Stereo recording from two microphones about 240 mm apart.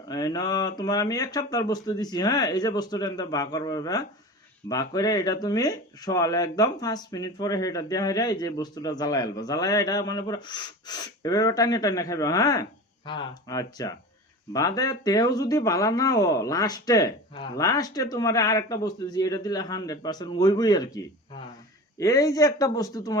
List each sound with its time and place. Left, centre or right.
0.1 s speech: centre